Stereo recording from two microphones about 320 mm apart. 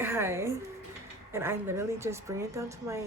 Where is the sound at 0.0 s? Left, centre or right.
Centre.